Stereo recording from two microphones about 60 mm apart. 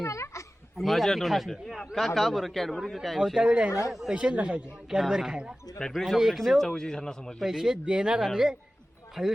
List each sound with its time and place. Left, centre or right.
0.0 s a sound: left
0.8 s a man's voice: centre
3.3 s speech: centre
3.7 s speech: left
4.1 s speech: centre
4.9 s speech: centre
5.9 s speech: centre
7.3 s speech: centre